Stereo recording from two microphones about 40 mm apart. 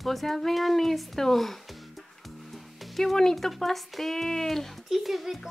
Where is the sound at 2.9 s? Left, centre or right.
Centre.